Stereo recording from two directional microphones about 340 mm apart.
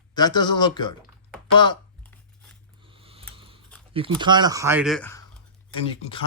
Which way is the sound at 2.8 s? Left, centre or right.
Centre.